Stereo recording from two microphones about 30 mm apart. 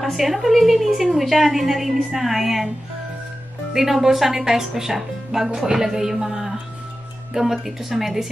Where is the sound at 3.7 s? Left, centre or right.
Centre.